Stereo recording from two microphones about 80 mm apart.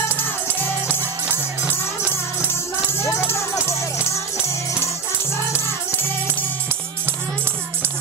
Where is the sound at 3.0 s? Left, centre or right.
Left.